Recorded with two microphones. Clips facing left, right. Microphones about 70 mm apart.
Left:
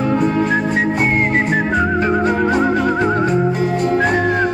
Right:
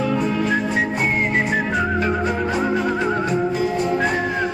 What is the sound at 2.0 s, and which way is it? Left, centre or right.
Music, left.